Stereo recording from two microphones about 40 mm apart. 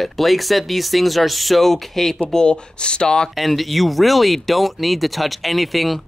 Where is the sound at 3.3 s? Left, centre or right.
Centre.